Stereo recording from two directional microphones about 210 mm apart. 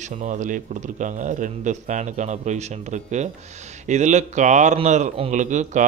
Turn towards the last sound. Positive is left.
turn(degrees=-35)  # may be behind; listen again after turning